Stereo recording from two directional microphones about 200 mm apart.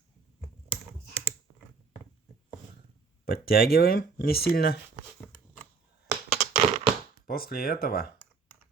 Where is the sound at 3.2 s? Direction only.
50° left (ahead or behind).